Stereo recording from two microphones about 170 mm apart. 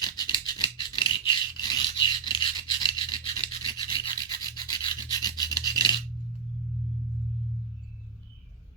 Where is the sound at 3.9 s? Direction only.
30° left (ahead or behind).